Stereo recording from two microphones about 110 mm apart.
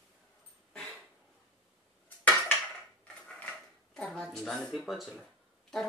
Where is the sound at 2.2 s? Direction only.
15° left (ahead or behind).